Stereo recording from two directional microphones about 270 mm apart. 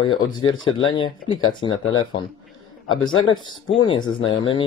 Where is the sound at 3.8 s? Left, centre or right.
Centre.